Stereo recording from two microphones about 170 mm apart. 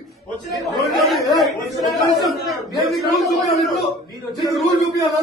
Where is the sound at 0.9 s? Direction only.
Centre (ahead or behind).